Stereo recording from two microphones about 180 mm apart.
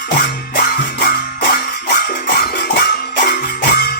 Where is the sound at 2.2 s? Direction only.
65° left (ahead or behind).